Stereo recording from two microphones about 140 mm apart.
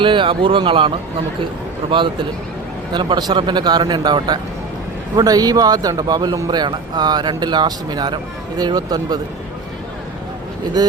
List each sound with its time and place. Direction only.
0.0 s speech: 35° right (ahead or behind)
2.9 s a man's voice: 35° right (ahead or behind)